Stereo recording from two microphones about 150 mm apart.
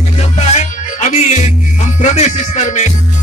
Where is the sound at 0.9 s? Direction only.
50° left (ahead or behind).